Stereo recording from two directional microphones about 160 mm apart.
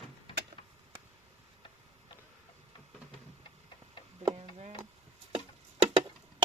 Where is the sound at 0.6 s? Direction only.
30° left (ahead or behind).